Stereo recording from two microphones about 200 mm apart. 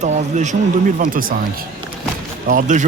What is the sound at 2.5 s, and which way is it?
Speech, 40° right (ahead or behind).